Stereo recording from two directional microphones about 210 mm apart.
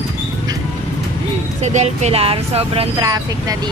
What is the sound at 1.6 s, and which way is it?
Speech, 35° right (ahead or behind).